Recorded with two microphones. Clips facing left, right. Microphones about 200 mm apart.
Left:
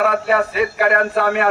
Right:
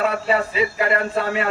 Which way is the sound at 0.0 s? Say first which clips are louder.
Left 3 dB; 60° left (ahead or behind).